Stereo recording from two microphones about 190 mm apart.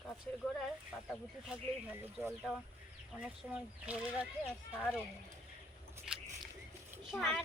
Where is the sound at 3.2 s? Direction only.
5° right (ahead or behind).